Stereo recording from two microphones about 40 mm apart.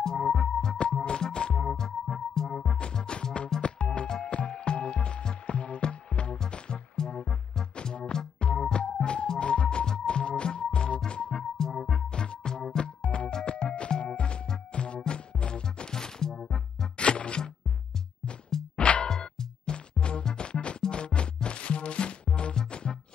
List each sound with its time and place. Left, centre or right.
0.0 s music: centre
3.6 s music: left
11.5 s music: centre
18.8 s music: left
19.0 s music: centre